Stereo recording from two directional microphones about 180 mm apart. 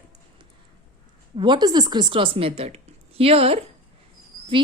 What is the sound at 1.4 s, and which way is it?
A woman's voice, 25° right (ahead or behind).